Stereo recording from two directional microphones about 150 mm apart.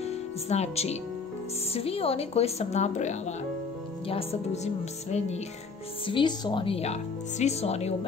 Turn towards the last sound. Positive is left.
turn(degrees=45)  # may be behind; listen again after turning